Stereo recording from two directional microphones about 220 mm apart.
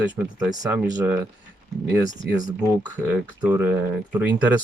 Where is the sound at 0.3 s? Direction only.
15° right (ahead or behind).